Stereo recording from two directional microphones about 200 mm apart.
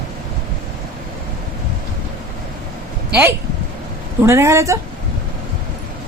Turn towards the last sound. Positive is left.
turn(degrees=-15)  # may be behind; listen again after turning